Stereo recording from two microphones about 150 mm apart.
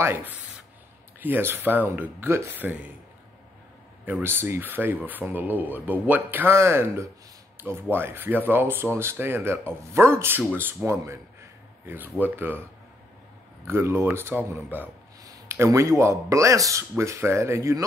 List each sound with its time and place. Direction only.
0.0 s speech: 15° right (ahead or behind)
4.0 s speech: 15° right (ahead or behind)
13.7 s speech: 15° right (ahead or behind)
15.2 s a sound: 25° right (ahead or behind)
15.5 s speech: 20° right (ahead or behind)